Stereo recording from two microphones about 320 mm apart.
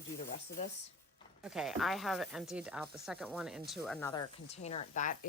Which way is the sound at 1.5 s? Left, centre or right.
Centre.